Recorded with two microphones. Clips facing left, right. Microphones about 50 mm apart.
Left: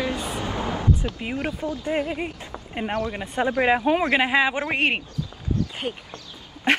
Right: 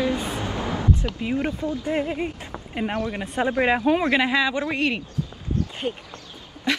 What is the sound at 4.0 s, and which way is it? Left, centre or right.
Speech, left.